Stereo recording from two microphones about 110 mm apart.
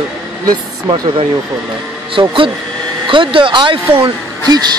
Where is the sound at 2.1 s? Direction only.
50° right (ahead or behind).